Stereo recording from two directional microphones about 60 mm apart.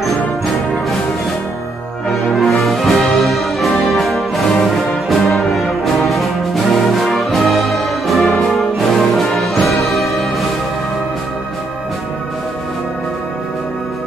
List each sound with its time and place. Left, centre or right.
2.3 s music: centre
7.2 s brass instrument: centre